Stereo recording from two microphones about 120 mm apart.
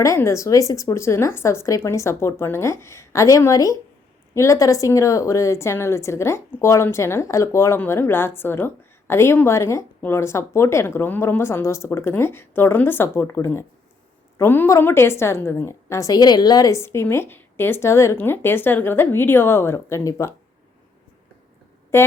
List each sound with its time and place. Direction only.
0.0 s a woman's voice: 25° left (ahead or behind)
21.9 s a woman's voice: 20° left (ahead or behind)